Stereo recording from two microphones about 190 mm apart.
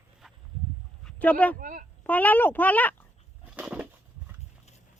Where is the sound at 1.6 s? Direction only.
45° right (ahead or behind).